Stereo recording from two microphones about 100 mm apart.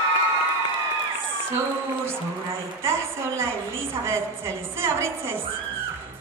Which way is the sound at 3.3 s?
25° right (ahead or behind).